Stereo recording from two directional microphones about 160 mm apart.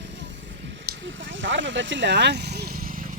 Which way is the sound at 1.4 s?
90° right.